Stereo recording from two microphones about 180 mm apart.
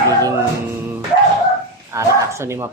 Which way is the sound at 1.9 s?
15° right (ahead or behind).